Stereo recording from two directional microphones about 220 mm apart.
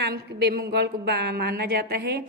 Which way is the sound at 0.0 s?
50° right (ahead or behind).